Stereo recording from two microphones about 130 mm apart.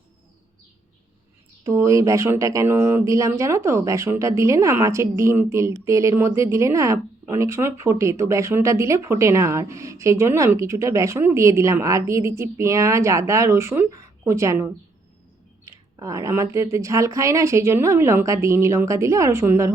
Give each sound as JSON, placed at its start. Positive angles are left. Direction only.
{"t": 1.6, "sound": "speech", "side_deg": -25}